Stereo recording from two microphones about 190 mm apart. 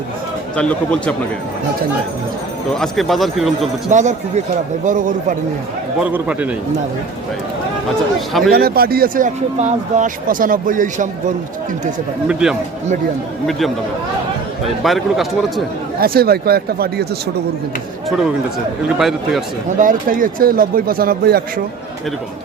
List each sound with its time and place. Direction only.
0.5 s a man's voice: 5° left (ahead or behind)
2.7 s a man's voice: centre (ahead or behind)
3.9 s speech: 40° right (ahead or behind)
6.0 s a man's voice: 5° right (ahead or behind)
8.3 s a man's voice: centre (ahead or behind)
8.5 s speech: 55° right (ahead or behind)
12.3 s a man's voice: 5° right (ahead or behind)
14.8 s a man's voice: centre (ahead or behind)
16.0 s speech: 55° right (ahead or behind)
18.9 s a man's voice: centre (ahead or behind)
19.8 s speech: 45° right (ahead or behind)